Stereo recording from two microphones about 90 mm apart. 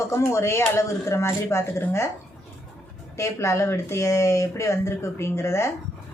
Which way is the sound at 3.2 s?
30° left (ahead or behind).